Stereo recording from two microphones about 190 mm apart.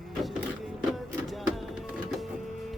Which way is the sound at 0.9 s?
Centre (ahead or behind).